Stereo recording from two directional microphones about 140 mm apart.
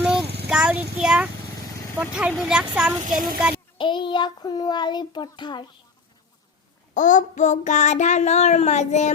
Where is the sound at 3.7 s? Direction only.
35° left (ahead or behind).